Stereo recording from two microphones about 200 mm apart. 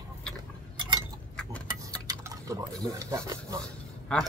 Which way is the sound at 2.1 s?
15° right (ahead or behind).